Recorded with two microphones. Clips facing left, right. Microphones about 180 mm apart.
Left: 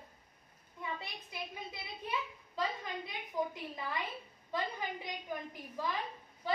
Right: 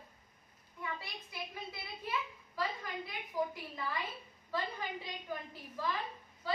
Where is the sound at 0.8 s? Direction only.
20° left (ahead or behind).